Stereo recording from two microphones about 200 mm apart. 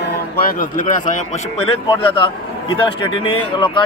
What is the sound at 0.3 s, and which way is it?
Speech, 45° left (ahead or behind).